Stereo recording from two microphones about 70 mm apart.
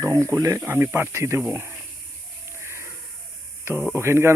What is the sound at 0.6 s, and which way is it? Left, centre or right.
Speech, right.